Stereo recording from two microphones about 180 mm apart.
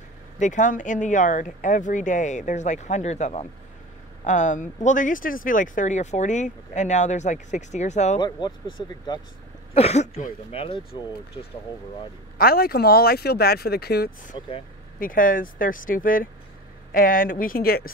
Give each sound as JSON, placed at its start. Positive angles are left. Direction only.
{"t": 0.4, "sound": "speech", "side_deg": 45}
{"t": 8.2, "sound": "speech", "side_deg": 25}
{"t": 9.8, "sound": "speech", "side_deg": 35}
{"t": 12.4, "sound": "speech", "side_deg": 55}